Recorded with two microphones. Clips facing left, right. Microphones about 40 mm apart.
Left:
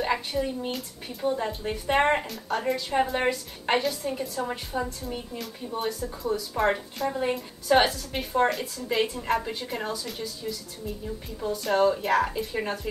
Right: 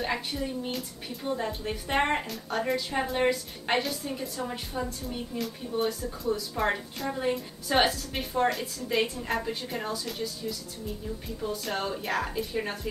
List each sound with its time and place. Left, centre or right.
0.0 s speech: centre
11.5 s speech: centre